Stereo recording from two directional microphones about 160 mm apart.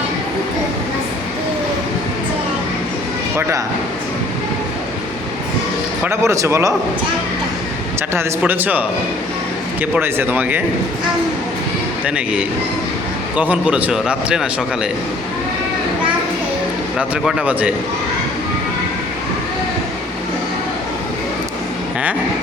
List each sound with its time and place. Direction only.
6.1 s speech: 20° right (ahead or behind)
8.1 s a man's voice: 15° right (ahead or behind)
9.8 s a man's voice: 10° right (ahead or behind)
12.0 s a man's voice: 5° right (ahead or behind)
17.0 s a man's voice: 5° right (ahead or behind)